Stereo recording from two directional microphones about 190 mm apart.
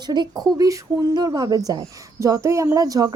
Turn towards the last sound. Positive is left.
turn(degrees=-20)  # may be behind; listen again after turning